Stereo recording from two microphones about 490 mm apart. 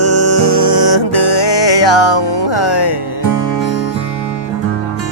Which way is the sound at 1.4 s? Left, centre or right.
Left.